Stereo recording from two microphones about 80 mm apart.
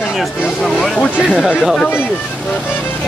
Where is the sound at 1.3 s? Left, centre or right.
Centre.